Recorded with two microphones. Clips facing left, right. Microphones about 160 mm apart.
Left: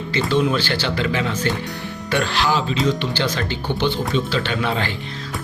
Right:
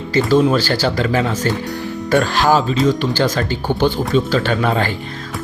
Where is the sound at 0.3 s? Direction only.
40° right (ahead or behind).